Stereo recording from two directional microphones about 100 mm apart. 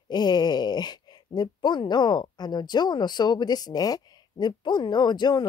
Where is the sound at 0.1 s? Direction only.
45° left (ahead or behind).